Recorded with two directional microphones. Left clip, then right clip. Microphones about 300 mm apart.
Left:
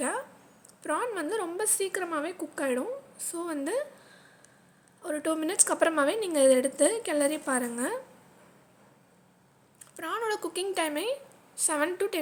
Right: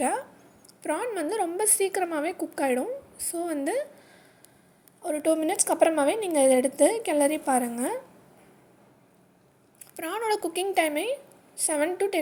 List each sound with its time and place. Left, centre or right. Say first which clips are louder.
0.8 s a woman's voice: right 2 dB; centre
5.0 s a woman's voice: right 5 dB; centre
9.9 s a woman's voice: right 3 dB; centre
10.9 s speech: right 3 dB; left
11.5 s a woman's voice: right 2 dB; centre